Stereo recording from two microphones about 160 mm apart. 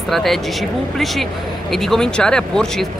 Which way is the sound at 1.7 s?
Centre (ahead or behind).